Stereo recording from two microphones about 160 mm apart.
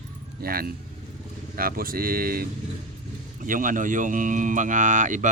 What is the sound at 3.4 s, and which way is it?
Speech, 55° right (ahead or behind).